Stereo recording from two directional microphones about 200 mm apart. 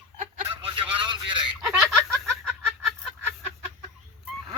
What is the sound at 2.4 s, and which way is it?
Fowl, centre (ahead or behind).